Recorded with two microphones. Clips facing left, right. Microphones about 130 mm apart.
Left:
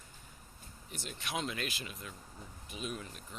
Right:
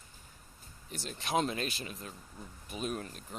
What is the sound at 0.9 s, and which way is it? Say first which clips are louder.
Speech: right 6 dB; 35° right (ahead or behind).